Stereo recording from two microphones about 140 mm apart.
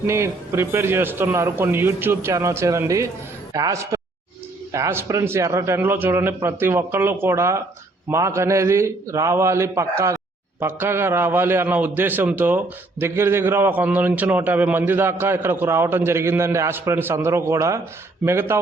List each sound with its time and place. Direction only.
0.1 s a man's voice: 20° right (ahead or behind)